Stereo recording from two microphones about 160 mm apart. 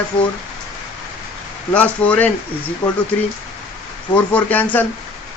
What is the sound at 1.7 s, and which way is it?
Speech, 10° left (ahead or behind).